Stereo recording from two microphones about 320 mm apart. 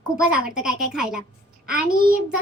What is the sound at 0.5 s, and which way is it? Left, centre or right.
Speech, centre.